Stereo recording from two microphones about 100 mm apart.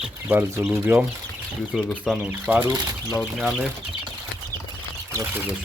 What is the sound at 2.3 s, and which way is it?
Speech, 20° right (ahead or behind).